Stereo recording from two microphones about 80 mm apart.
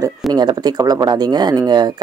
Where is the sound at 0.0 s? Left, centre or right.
Right.